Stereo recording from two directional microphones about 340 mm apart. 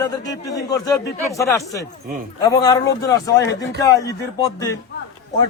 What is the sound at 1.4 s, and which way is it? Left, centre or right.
A man's voice, centre.